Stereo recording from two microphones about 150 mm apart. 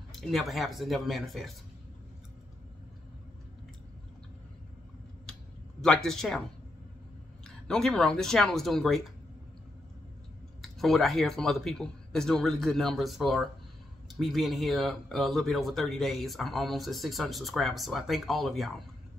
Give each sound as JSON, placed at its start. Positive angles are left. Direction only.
{"t": 0.1, "sound": "speech", "side_deg": 0}
{"t": 5.8, "sound": "speech", "side_deg": 5}
{"t": 7.4, "sound": "speech", "side_deg": 5}
{"t": 10.6, "sound": "speech", "side_deg": 0}